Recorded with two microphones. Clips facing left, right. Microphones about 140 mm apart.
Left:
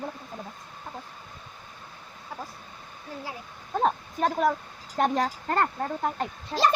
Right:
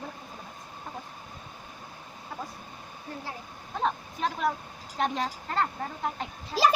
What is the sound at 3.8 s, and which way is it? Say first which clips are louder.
A woman's voice: left 4 dB; 45° left (ahead or behind).